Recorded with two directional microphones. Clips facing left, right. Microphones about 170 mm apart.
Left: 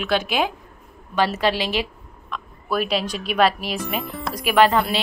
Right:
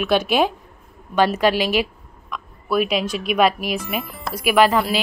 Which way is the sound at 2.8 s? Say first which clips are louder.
Right 3 dB; 35° left (ahead or behind).